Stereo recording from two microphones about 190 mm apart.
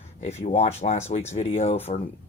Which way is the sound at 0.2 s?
35° left (ahead or behind).